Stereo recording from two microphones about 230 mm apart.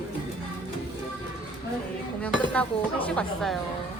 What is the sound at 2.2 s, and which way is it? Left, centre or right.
Speech, centre.